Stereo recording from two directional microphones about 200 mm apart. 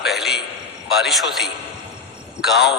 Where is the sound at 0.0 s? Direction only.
Centre (ahead or behind).